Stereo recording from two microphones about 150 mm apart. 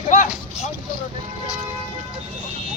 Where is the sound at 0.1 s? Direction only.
55° left (ahead or behind).